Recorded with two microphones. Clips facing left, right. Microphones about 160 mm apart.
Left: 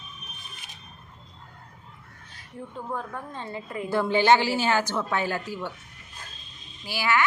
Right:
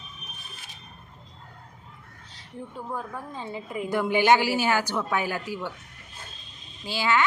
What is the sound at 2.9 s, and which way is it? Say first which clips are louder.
A woman's voice: left 1 dB; 10° right (ahead or behind).